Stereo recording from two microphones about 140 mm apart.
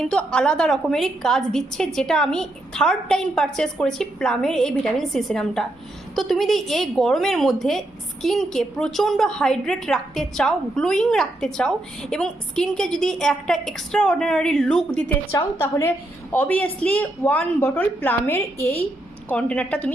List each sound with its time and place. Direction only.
0.0 s a woman's voice: 5° left (ahead or behind)
15.6 s a woman's voice: 20° left (ahead or behind)